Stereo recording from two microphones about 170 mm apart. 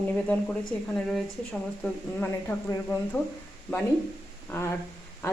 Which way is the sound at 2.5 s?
10° left (ahead or behind).